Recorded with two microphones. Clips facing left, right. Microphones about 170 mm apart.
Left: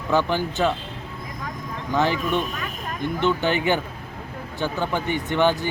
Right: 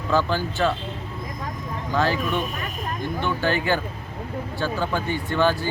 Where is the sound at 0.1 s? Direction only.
20° left (ahead or behind).